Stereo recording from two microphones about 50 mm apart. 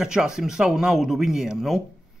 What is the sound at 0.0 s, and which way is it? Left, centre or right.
Speech, centre.